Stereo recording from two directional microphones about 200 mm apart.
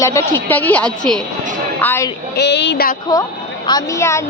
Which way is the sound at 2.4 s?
60° left (ahead or behind).